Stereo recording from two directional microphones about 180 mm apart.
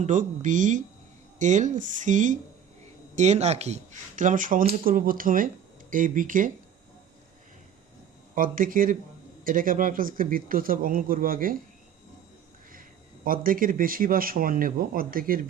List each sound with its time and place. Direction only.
0.0 s speech: 45° right (ahead or behind)
8.4 s speech: 50° right (ahead or behind)
13.2 s speech: 50° right (ahead or behind)